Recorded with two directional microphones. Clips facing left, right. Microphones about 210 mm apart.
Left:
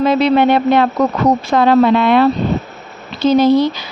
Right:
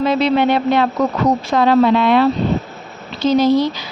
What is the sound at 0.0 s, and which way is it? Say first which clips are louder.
A woman's voice: left 3 dB; 50° left (ahead or behind).